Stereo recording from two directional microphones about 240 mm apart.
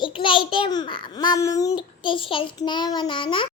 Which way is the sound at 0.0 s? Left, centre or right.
Centre.